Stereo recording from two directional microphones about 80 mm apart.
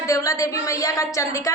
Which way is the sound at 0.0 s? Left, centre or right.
Left.